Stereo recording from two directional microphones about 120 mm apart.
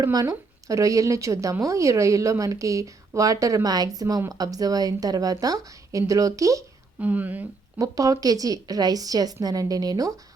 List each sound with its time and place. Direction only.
0.0 s a woman's voice: 30° right (ahead or behind)
7.0 s speech: 15° right (ahead or behind)
7.8 s a woman's voice: 30° right (ahead or behind)